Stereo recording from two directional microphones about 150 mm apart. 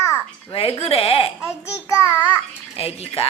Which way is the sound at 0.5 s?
40° left (ahead or behind).